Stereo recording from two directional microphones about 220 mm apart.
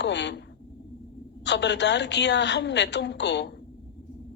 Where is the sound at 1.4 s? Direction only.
50° left (ahead or behind).